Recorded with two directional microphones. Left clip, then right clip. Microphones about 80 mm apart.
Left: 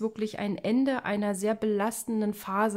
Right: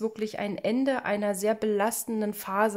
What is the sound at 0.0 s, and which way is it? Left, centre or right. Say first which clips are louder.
A woman's voice: right 1 dB; centre.